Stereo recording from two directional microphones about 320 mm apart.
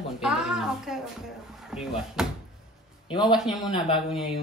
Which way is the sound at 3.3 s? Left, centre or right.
Centre.